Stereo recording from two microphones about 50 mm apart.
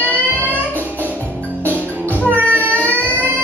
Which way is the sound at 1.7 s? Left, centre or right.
Right.